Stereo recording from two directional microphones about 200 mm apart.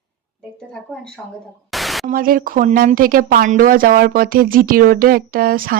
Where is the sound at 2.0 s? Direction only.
45° right (ahead or behind).